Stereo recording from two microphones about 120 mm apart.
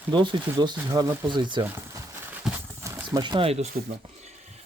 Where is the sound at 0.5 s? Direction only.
30° right (ahead or behind).